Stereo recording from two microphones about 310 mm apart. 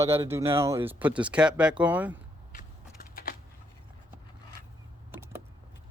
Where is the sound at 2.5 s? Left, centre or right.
Left.